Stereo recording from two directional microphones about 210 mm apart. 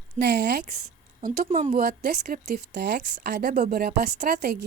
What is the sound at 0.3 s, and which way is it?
Speech, 55° right (ahead or behind).